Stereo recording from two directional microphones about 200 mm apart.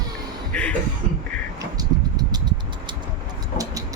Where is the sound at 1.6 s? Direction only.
20° right (ahead or behind).